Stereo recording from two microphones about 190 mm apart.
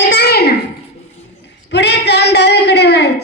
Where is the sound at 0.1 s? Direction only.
60° left (ahead or behind).